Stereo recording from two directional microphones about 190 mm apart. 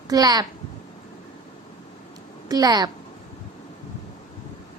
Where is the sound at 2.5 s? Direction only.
20° right (ahead or behind).